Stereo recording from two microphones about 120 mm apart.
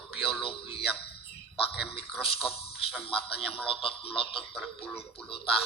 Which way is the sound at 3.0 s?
50° left (ahead or behind).